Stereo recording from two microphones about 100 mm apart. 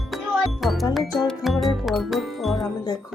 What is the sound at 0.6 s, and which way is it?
Music, centre (ahead or behind).